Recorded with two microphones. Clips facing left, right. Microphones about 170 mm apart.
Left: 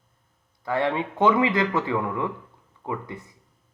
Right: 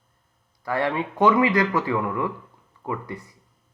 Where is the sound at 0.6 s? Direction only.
20° left (ahead or behind).